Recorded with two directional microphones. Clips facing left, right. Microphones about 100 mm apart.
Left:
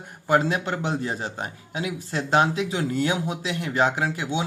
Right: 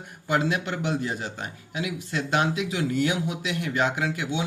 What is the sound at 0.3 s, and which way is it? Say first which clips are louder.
A man's voice: left 3 dB; 35° left (ahead or behind).